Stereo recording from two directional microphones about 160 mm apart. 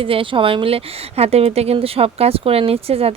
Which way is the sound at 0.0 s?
35° right (ahead or behind).